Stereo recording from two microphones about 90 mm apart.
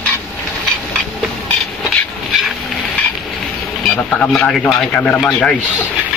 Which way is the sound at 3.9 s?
10° left (ahead or behind).